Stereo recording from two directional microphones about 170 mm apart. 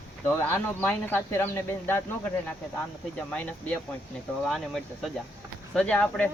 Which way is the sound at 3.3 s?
10° left (ahead or behind).